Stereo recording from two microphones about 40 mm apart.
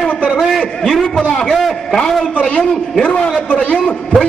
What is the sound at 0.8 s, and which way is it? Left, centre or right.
Speech, centre.